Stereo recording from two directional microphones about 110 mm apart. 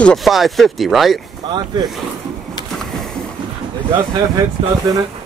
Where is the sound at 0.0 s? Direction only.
Centre (ahead or behind).